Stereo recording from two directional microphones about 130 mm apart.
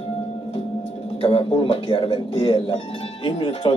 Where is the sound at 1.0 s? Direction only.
45° left (ahead or behind).